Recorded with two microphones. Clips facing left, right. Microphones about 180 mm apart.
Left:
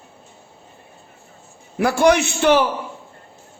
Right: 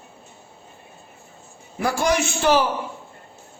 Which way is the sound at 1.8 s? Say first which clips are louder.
Left 6 dB; 60° left (ahead or behind).